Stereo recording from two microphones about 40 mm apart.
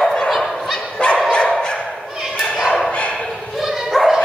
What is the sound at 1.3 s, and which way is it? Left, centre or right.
Dog, left.